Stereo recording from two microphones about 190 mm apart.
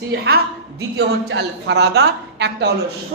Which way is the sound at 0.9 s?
65° right (ahead or behind).